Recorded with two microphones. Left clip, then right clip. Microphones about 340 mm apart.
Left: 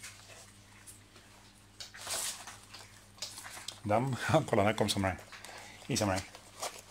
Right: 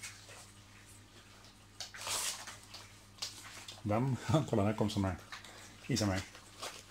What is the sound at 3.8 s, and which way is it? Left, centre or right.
Speech, left.